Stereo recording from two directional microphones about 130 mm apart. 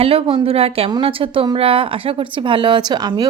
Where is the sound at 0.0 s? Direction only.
50° right (ahead or behind).